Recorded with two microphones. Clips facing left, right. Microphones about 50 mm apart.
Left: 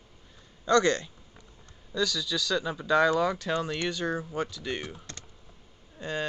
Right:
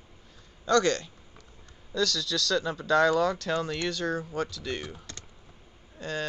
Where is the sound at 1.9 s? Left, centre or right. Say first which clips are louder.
Right 1 dB; centre.